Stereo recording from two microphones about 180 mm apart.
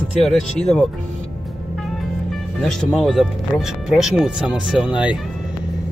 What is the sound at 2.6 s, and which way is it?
Speech, 5° left (ahead or behind).